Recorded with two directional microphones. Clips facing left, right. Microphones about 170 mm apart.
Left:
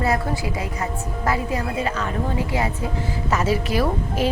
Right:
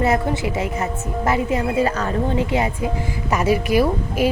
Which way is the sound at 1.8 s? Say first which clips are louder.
Right 5 dB; 40° right (ahead or behind).